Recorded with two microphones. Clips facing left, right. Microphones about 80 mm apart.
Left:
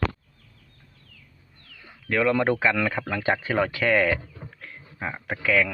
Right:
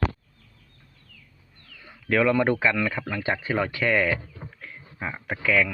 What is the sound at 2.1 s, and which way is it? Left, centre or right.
Speech, centre.